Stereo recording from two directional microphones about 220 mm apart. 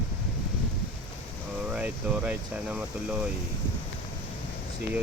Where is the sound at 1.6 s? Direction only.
5° right (ahead or behind).